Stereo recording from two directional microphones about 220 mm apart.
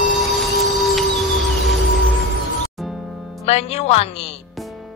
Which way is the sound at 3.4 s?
30° left (ahead or behind).